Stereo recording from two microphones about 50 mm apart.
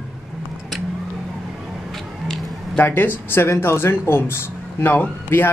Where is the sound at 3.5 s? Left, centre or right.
Left.